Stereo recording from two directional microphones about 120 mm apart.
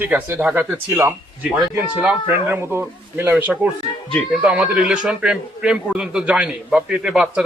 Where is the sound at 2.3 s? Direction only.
20° right (ahead or behind).